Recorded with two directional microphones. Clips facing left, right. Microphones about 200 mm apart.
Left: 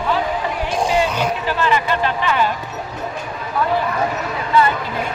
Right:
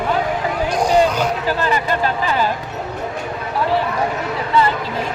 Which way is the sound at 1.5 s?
40° right (ahead or behind).